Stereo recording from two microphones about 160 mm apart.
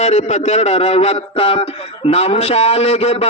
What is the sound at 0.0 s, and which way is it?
A man's voice, 45° left (ahead or behind).